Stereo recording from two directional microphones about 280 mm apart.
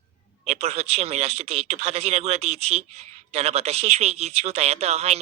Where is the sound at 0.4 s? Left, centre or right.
Right.